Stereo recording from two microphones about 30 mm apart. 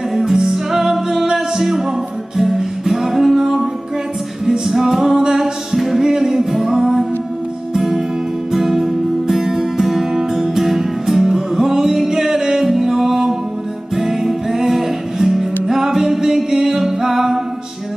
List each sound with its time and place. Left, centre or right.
0.2 s music: centre
5.7 s music: centre